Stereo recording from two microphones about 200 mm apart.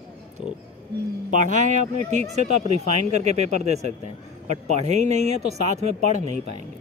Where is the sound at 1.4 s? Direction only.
40° right (ahead or behind).